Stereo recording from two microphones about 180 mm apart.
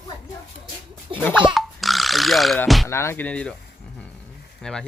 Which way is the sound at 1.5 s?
Centre (ahead or behind).